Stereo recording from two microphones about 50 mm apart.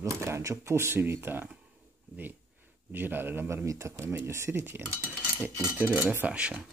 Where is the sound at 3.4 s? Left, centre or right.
Right.